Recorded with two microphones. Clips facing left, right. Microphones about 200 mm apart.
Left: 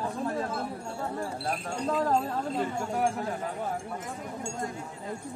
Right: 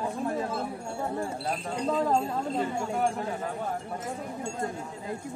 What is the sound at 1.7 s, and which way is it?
Speech, 5° left (ahead or behind).